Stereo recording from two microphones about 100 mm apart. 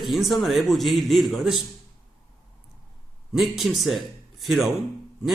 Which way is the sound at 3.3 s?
5° right (ahead or behind).